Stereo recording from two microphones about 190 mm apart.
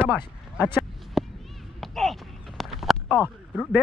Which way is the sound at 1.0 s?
Centre (ahead or behind).